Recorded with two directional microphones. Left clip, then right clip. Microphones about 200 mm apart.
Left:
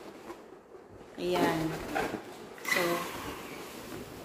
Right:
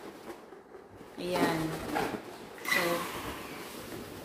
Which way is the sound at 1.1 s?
15° left (ahead or behind).